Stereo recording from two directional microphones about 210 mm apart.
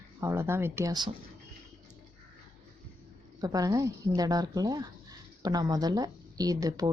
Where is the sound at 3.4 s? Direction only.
15° right (ahead or behind).